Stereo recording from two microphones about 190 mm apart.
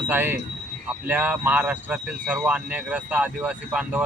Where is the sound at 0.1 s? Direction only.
10° right (ahead or behind).